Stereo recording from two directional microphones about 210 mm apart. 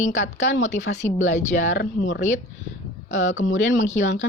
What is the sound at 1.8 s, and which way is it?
Speech, 60° left (ahead or behind).